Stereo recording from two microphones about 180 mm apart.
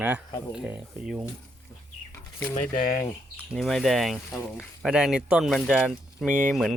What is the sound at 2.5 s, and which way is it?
Speech, 45° left (ahead or behind).